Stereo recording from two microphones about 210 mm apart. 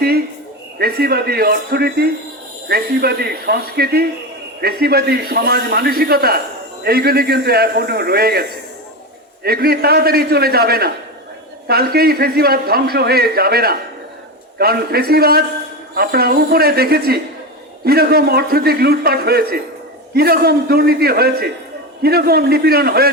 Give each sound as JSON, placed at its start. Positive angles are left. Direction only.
{"t": 0.8, "sound": "a man's voice", "side_deg": -45}